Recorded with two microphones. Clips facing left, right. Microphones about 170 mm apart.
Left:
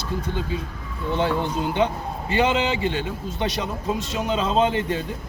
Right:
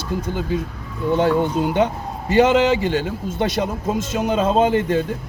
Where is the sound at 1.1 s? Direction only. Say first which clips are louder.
Right 6 dB; 50° right (ahead or behind).